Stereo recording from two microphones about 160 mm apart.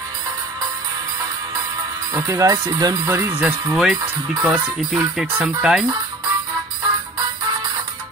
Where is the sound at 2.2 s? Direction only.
20° right (ahead or behind).